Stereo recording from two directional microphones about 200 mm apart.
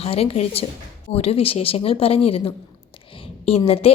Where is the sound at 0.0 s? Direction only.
30° left (ahead or behind).